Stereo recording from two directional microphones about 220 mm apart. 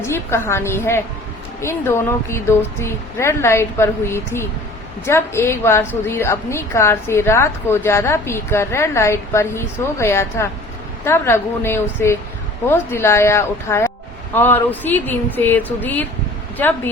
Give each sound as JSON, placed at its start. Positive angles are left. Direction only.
{"t": 0.0, "sound": "a woman's voice", "side_deg": 10}